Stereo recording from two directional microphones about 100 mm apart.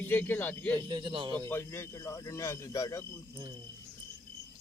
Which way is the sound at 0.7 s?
50° right (ahead or behind).